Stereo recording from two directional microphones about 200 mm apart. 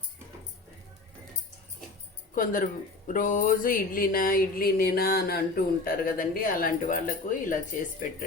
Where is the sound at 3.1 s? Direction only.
40° left (ahead or behind).